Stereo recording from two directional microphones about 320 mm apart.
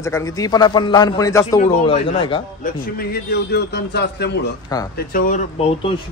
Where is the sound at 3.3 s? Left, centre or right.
Left.